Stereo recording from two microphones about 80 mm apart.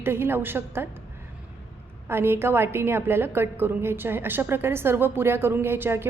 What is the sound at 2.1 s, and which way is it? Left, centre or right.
A woman's voice, right.